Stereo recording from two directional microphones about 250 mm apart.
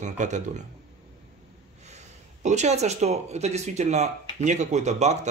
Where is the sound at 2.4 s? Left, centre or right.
Right.